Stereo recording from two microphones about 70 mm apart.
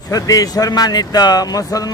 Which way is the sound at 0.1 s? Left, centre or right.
Left.